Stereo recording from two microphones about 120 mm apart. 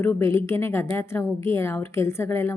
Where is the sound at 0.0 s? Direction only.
20° left (ahead or behind).